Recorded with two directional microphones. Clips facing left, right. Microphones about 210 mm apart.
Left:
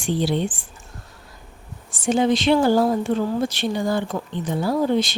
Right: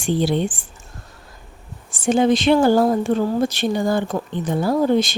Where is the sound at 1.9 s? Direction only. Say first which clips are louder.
Right 3 dB; 50° right (ahead or behind).